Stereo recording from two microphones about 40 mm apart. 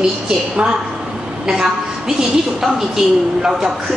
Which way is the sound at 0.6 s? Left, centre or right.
Right.